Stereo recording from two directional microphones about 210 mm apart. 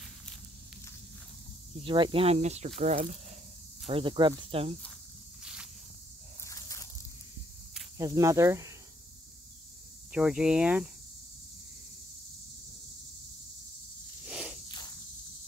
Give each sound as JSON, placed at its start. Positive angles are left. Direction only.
{"t": 1.8, "sound": "speech", "side_deg": -25}
{"t": 5.4, "sound": "snake", "side_deg": -5}
{"t": 6.4, "sound": "a sound", "side_deg": 15}
{"t": 8.0, "sound": "speech", "side_deg": -15}
{"t": 10.1, "sound": "speech", "side_deg": -5}
{"t": 14.2, "sound": "snake", "side_deg": -5}